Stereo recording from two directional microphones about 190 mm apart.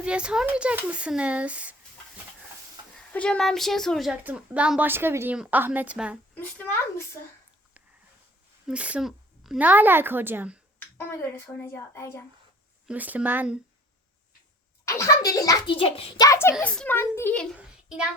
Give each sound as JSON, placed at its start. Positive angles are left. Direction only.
{"t": 0.0, "sound": "a woman's voice", "side_deg": -5}
{"t": 3.1, "sound": "a woman's voice", "side_deg": 5}
{"t": 6.3, "sound": "a sound", "side_deg": 10}
{"t": 8.6, "sound": "a child's voice", "side_deg": -5}
{"t": 10.9, "sound": "a child's voice", "side_deg": 15}
{"t": 12.9, "sound": "a child's voice", "side_deg": -10}
{"t": 14.8, "sound": "a child's voice", "side_deg": 15}
{"t": 17.6, "sound": "a sound", "side_deg": -5}